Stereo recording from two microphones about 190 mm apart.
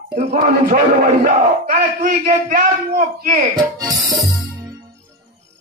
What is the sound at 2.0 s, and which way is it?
Speech, 40° right (ahead or behind).